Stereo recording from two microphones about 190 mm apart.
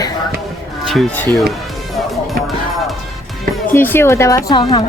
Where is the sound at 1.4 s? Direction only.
Centre (ahead or behind).